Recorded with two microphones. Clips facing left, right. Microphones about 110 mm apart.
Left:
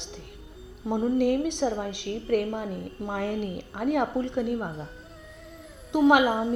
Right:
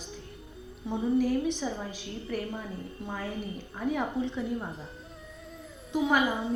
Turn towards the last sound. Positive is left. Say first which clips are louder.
# left 6 dB
turn(degrees=70)  # may be behind; listen again after turning